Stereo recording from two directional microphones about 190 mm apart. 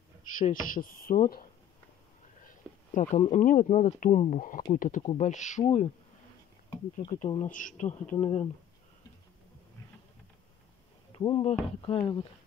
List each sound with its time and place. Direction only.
0.4 s speech: 45° left (ahead or behind)
2.4 s speech: 40° left (ahead or behind)
7.0 s speech: 25° left (ahead or behind)
7.4 s speech: 45° left (ahead or behind)
11.1 s speech: 25° left (ahead or behind)